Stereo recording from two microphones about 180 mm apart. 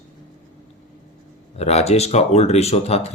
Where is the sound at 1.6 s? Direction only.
35° left (ahead or behind).